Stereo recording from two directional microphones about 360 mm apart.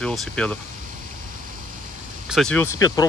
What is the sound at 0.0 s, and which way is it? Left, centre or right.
Speech, centre.